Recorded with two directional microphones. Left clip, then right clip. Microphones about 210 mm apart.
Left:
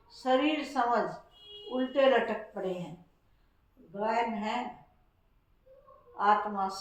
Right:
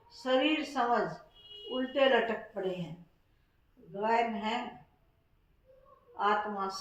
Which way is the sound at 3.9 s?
20° left (ahead or behind).